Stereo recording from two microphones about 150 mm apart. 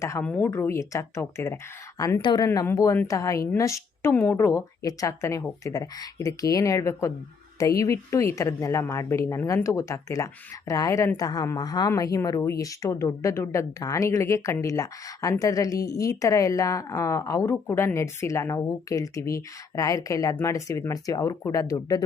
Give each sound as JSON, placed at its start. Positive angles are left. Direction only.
{"t": 0.0, "sound": "a woman's voice", "side_deg": 15}